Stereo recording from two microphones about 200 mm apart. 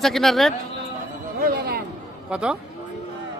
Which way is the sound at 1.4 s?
50° right (ahead or behind).